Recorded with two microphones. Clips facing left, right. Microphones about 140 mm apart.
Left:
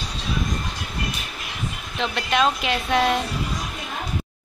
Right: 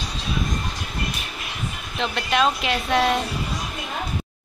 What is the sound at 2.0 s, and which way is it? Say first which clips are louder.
Speech: even; centre (ahead or behind).